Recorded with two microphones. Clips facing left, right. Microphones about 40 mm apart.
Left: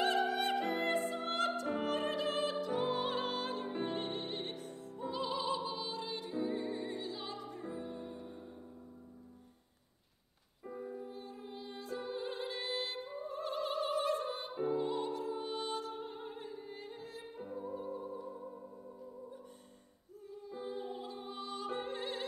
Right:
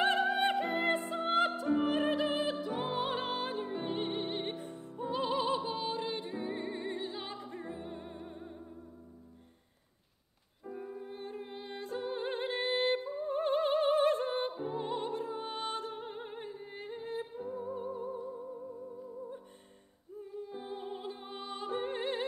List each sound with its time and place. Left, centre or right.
0.2 s music: right
10.8 s music: right
20.2 s music: right